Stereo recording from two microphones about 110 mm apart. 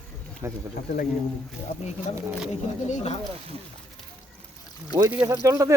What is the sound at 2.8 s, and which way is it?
Speech, 85° left.